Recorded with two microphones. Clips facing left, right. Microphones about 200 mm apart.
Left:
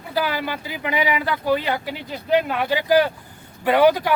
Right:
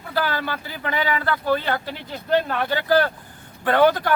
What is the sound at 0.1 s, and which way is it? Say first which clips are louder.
Speech: left 1 dB; 10° left (ahead or behind).